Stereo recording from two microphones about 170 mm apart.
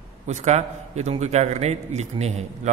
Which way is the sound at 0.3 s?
40° right (ahead or behind).